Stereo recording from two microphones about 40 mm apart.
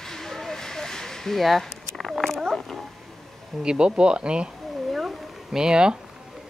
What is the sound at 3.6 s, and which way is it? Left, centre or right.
Speech, right.